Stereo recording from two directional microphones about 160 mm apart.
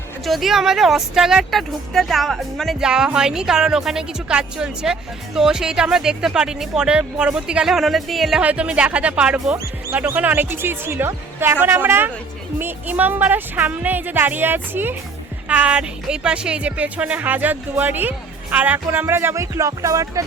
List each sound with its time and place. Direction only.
0.3 s speech: centre (ahead or behind); by 20.2 s 20° right (ahead or behind)